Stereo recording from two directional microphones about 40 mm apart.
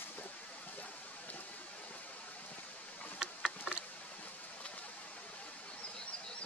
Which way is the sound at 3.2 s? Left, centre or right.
Centre.